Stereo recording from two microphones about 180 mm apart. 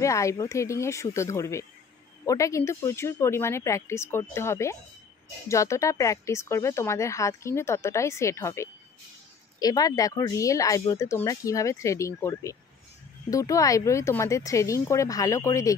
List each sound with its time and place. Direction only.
0.0 s speech: 15° left (ahead or behind)